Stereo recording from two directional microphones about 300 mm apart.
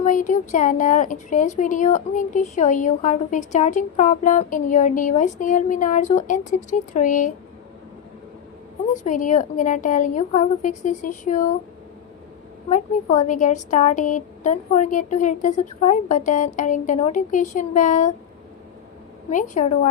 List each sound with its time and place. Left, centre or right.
0.0 s a woman's voice: left
8.9 s a woman's voice: left
12.7 s a woman's voice: left
19.3 s a woman's voice: left